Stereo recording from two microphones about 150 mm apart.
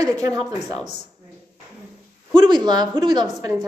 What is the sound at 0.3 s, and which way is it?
Speech, 25° right (ahead or behind).